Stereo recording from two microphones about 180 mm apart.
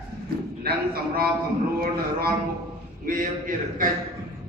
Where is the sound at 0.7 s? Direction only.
55° right (ahead or behind).